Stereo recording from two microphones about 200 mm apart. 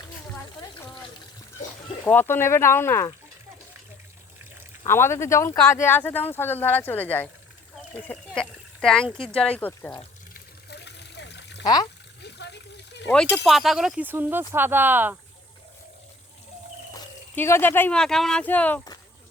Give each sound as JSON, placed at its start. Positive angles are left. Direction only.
{"t": 2.0, "sound": "speech", "side_deg": 10}
{"t": 4.8, "sound": "speech", "side_deg": 10}
{"t": 10.7, "sound": "water", "side_deg": 55}
{"t": 11.6, "sound": "speech", "side_deg": 20}
{"t": 12.2, "sound": "a sound", "side_deg": 60}
{"t": 13.3, "sound": "speech", "side_deg": 0}
{"t": 16.9, "sound": "speech", "side_deg": 10}